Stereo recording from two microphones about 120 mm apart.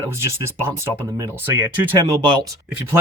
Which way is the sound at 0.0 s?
25° right (ahead or behind).